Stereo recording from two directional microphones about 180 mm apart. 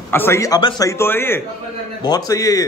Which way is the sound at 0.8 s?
15° left (ahead or behind).